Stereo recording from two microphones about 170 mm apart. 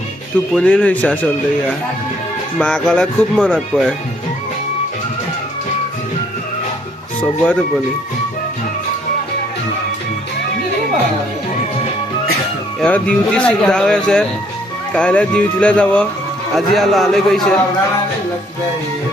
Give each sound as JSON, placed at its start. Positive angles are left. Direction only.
{"t": 0.5, "sound": "speech", "side_deg": 5}
{"t": 2.6, "sound": "speech", "side_deg": 5}
{"t": 7.2, "sound": "speech", "side_deg": 10}
{"t": 12.8, "sound": "speech", "side_deg": 5}